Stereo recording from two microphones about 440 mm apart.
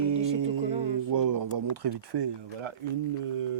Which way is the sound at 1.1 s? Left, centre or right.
Right.